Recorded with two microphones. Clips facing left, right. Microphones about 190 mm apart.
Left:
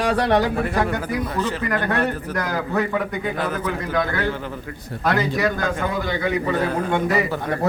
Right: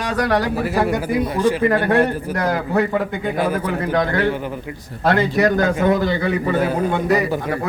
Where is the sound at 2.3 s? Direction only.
30° right (ahead or behind).